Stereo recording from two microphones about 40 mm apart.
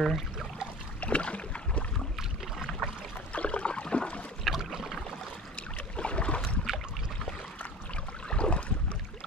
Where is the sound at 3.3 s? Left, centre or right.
Left.